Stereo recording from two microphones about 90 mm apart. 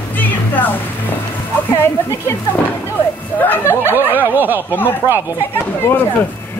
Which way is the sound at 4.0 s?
20° right (ahead or behind).